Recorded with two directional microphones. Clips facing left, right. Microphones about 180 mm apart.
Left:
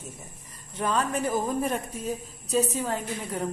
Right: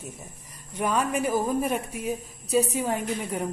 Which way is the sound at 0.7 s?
10° right (ahead or behind).